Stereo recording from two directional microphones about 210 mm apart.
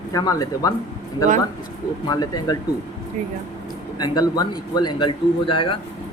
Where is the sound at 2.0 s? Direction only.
20° left (ahead or behind).